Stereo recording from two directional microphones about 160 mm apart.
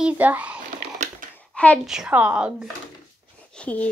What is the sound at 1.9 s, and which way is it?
Speech, 5° right (ahead or behind).